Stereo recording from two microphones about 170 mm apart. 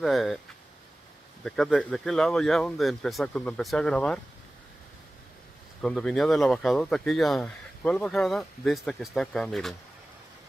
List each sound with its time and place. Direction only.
0.0 s speech: centre (ahead or behind)
1.4 s speech: 5° left (ahead or behind)
5.8 s speech: 5° left (ahead or behind)